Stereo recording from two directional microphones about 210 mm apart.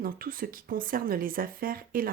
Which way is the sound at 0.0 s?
45° right (ahead or behind).